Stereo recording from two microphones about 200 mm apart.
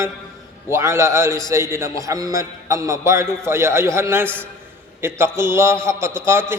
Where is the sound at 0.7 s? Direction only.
15° right (ahead or behind).